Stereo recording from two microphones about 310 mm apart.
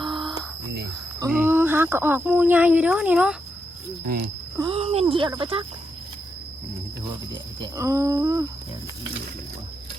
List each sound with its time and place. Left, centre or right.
0.0 s a sound: centre
1.2 s speech: centre
4.0 s speech: right
4.5 s speech: centre
7.6 s speech: centre